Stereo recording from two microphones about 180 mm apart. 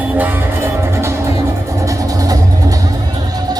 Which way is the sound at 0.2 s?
10° right (ahead or behind).